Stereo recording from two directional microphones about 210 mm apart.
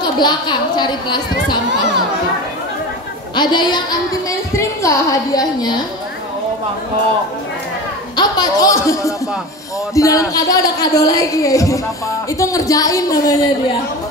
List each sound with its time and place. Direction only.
0.0 s a woman's voice: 20° left (ahead or behind)
3.3 s a woman's voice: 20° left (ahead or behind)
8.2 s speech: 20° left (ahead or behind)